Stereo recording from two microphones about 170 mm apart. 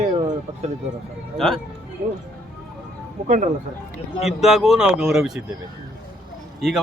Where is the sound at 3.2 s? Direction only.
45° right (ahead or behind).